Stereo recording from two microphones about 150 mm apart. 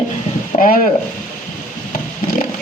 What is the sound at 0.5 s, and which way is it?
Speech, 45° left (ahead or behind).